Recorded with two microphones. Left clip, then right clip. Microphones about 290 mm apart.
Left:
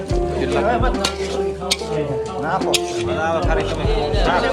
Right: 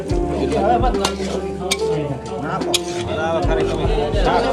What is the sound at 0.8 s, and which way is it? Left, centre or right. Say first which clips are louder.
Speech: right 2 dB; centre.